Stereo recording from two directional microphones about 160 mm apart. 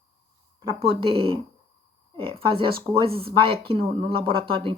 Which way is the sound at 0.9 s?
35° right (ahead or behind).